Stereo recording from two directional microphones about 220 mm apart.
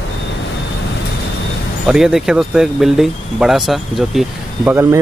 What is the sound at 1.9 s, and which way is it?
Speech, 5° right (ahead or behind).